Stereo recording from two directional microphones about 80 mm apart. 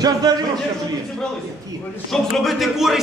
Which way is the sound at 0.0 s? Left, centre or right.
Right.